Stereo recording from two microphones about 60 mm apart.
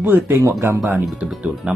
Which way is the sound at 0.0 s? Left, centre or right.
Right.